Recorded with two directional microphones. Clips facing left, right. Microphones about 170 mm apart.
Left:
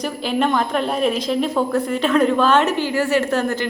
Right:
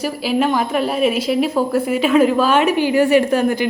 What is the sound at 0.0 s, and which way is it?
Speech, 5° right (ahead or behind).